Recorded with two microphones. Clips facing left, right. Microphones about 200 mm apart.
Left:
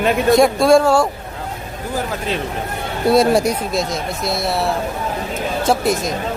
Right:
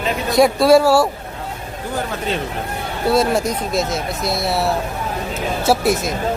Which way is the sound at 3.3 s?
15° left (ahead or behind).